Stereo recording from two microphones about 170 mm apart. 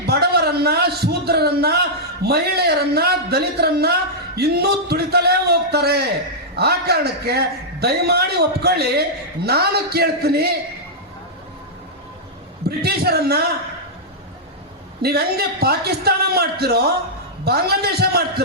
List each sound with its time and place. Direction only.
0.0 s a man's voice: 70° right (ahead or behind)
12.6 s a man's voice: 65° right (ahead or behind)
15.0 s a man's voice: 65° right (ahead or behind)